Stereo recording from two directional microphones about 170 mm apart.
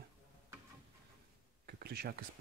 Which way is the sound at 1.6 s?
70° right (ahead or behind).